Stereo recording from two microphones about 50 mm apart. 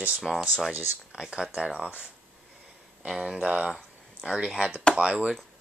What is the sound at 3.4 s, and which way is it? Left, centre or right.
Speech, right.